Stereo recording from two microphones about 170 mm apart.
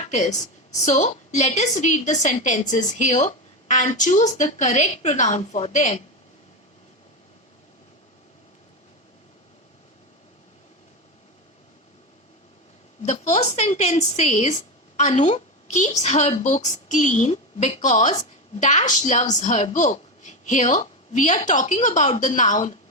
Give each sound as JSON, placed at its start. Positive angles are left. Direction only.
{"t": 0.1, "sound": "a woman's voice", "side_deg": 45}
{"t": 13.1, "sound": "a woman's voice", "side_deg": 40}